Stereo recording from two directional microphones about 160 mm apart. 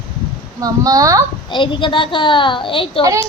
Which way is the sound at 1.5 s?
30° left (ahead or behind).